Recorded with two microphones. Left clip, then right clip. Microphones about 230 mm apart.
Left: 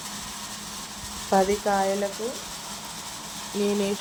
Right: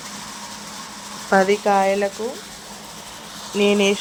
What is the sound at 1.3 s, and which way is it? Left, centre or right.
Speech, right.